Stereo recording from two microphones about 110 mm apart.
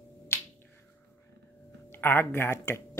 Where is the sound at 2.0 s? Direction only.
20° left (ahead or behind).